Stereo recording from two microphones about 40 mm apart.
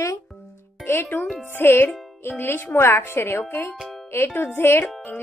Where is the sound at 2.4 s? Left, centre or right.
Left.